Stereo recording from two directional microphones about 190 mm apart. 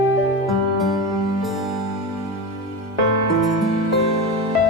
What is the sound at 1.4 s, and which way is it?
Music, centre (ahead or behind).